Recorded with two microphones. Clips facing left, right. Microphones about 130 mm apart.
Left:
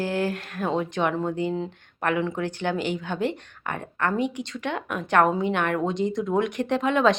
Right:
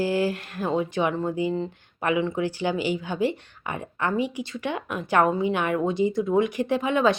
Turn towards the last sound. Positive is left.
turn(degrees=-5)  # may be behind; listen again after turning